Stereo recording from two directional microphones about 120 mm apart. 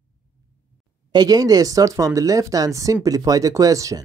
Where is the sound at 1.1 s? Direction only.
35° right (ahead or behind).